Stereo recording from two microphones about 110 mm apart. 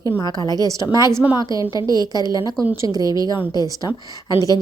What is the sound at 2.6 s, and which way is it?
Speech, 25° right (ahead or behind).